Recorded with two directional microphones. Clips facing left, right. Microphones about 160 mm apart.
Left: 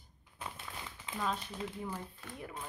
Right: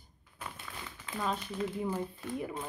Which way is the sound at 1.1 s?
25° left (ahead or behind).